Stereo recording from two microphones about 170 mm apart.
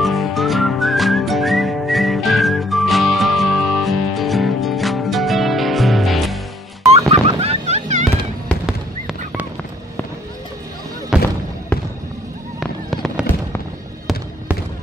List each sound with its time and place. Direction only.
0.0 s whistling: centre (ahead or behind)
7.1 s fowl: 35° right (ahead or behind)
11.1 s a sound: 5° right (ahead or behind)
12.5 s fireworks: centre (ahead or behind)